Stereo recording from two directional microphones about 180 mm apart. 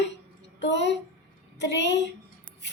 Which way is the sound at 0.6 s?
80° left.